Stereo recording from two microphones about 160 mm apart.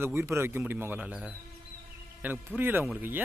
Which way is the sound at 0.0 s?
15° right (ahead or behind).